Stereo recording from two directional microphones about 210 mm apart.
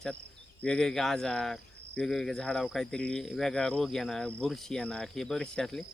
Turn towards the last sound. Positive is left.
turn(degrees=0)  # may be behind; listen again after turning